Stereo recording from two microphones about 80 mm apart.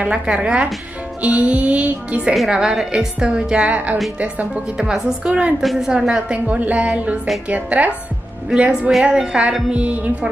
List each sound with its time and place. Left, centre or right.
0.0 s a woman's voice: centre
2.3 s a woman's voice: centre